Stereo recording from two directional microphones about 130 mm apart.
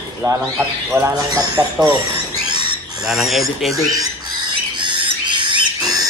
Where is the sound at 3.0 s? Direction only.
Centre (ahead or behind).